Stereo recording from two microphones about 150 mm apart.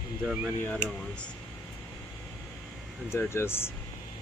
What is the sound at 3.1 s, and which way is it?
Speech, 15° left (ahead or behind).